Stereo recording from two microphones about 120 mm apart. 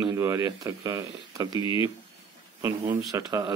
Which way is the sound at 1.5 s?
45° left (ahead or behind).